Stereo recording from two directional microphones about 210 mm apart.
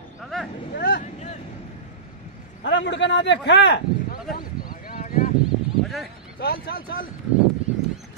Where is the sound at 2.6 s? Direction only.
60° left (ahead or behind).